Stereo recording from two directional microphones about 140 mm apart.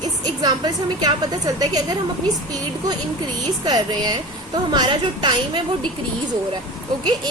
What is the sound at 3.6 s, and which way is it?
A woman's voice, 30° right (ahead or behind).